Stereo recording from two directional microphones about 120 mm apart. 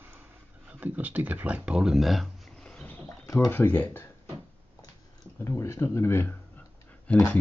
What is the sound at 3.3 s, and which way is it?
Speech, 20° left (ahead or behind).